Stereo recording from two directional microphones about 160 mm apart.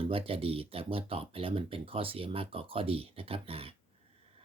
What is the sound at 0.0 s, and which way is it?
Speech, 35° right (ahead or behind).